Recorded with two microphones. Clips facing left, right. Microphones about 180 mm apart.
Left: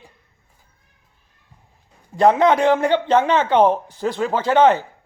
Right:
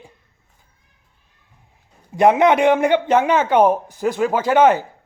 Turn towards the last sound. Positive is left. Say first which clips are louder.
# right 1 dB
turn(degrees=-10)  # may be behind; listen again after turning